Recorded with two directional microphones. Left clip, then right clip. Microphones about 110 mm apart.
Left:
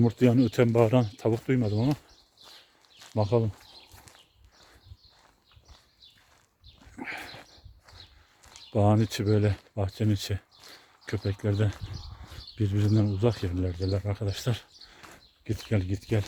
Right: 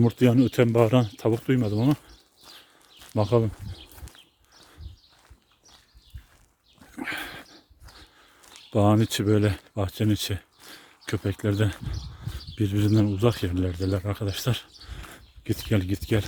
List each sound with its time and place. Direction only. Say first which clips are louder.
0.0 s speech: right 2 dB; 25° right (ahead or behind)
3.2 s speech: right 3 dB; 55° right (ahead or behind)
6.9 s horse: right 5 dB; 45° right (ahead or behind)
8.7 s speech: right 3 dB; 40° right (ahead or behind)